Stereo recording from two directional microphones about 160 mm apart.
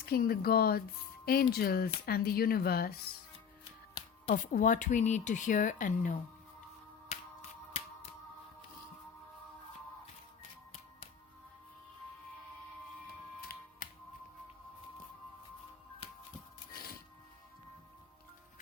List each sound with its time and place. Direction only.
0.0 s speech: 70° left (ahead or behind)
4.5 s speech: 55° left (ahead or behind)
7.1 s music: 40° left (ahead or behind)
16.7 s music: 70° left (ahead or behind)